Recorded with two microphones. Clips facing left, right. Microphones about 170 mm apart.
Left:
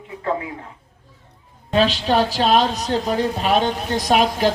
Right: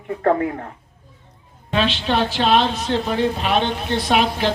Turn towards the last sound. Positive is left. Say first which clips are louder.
# left 2 dB
turn(degrees=40)  # may be behind; listen again after turning